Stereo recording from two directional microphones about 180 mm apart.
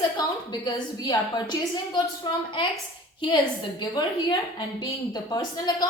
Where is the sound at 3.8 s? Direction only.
20° left (ahead or behind).